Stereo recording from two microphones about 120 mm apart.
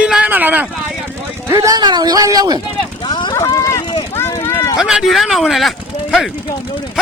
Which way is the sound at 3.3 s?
25° left (ahead or behind).